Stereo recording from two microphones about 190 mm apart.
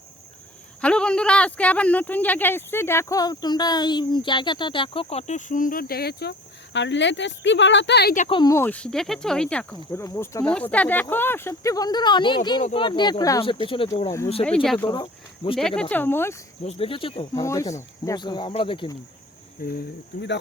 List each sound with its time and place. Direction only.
0.8 s speech: 5° left (ahead or behind); by 6.3 s 60° left (ahead or behind)
6.7 s speech: 70° left (ahead or behind)
8.3 s speech: 20° left (ahead or behind)
14.4 s speech: 5° left (ahead or behind)
16.6 s speech: 30° left (ahead or behind)
17.4 s speech: 15° left (ahead or behind)
19.6 s speech: 50° left (ahead or behind)